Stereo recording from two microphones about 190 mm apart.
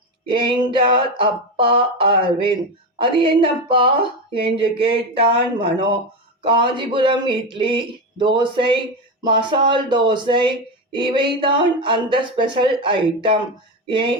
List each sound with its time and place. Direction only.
0.3 s speech: 25° right (ahead or behind)